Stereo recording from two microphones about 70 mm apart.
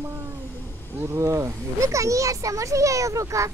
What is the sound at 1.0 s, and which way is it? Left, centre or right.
Speech, right.